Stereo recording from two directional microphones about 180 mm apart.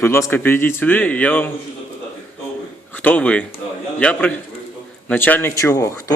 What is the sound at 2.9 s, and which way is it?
A man's voice, 10° left (ahead or behind).